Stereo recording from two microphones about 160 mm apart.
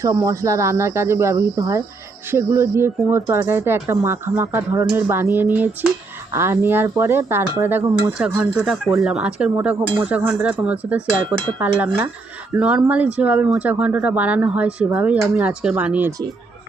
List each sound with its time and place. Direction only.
0.0 s speech: 20° right (ahead or behind)